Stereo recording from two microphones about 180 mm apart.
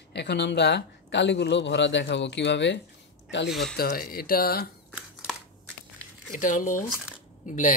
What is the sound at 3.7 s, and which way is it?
Speech, 55° left (ahead or behind).